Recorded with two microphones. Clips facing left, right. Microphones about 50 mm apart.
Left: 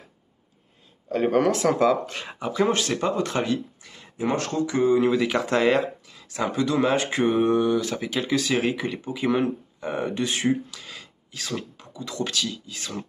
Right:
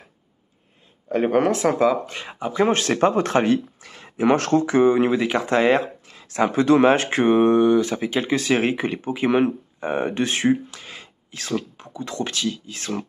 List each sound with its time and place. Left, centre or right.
1.0 s speech: right
1.6 s speech: centre
2.7 s speech: right
5.2 s speech: centre
5.8 s a sound: right
6.3 s speech: right
7.2 s speech: right
10.5 s speech: right